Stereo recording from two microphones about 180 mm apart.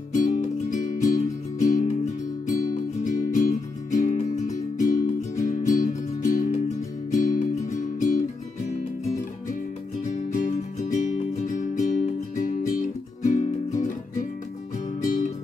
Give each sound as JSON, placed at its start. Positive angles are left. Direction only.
{"t": 0.1, "sound": "music", "side_deg": 50}
{"t": 10.3, "sound": "music", "side_deg": 45}
{"t": 15.0, "sound": "music", "side_deg": 45}